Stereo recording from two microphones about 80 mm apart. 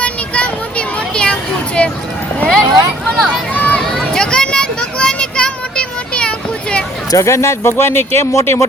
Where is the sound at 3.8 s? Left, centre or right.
Centre.